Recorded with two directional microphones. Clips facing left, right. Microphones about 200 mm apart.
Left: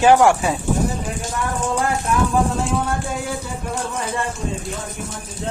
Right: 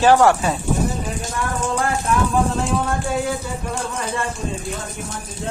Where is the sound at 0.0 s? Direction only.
10° left (ahead or behind).